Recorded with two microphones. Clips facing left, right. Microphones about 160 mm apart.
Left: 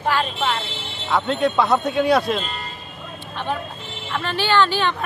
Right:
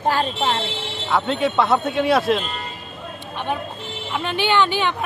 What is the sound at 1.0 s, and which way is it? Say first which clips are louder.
Speech: left 1 dB; centre (ahead or behind).